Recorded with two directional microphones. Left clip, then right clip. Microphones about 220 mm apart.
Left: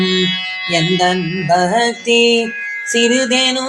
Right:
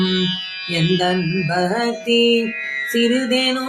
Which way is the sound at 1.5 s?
15° left (ahead or behind).